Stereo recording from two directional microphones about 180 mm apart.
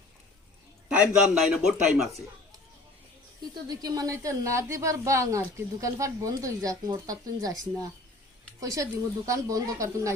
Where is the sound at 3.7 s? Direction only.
20° right (ahead or behind).